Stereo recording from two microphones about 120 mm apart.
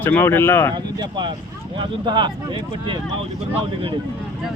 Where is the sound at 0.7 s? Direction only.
40° right (ahead or behind).